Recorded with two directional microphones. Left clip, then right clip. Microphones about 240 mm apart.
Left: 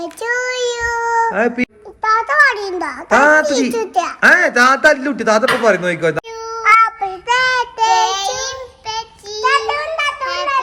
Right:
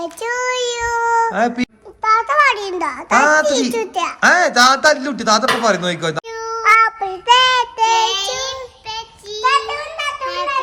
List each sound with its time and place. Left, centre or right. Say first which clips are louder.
0.0 s a child's voice: left 1 dB; centre
6.8 s child singing: right 2 dB; right; by 8.1 s centre
8.4 s child singing: left 1 dB; centre